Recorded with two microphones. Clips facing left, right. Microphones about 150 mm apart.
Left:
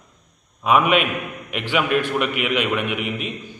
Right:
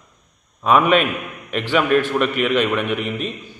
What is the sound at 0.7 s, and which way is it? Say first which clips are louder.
Speech: right 2 dB; 40° right (ahead or behind).